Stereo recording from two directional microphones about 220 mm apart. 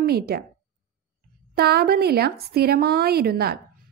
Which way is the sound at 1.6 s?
45° right (ahead or behind).